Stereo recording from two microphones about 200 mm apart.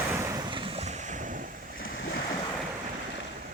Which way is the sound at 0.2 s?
15° right (ahead or behind).